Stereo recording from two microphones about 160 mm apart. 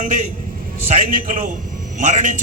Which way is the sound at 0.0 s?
50° right (ahead or behind).